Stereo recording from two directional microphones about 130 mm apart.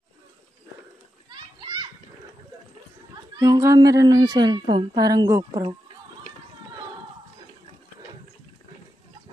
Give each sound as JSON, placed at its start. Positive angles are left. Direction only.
{"t": 1.3, "sound": "children playing", "side_deg": -35}
{"t": 3.3, "sound": "a woman's voice", "side_deg": -30}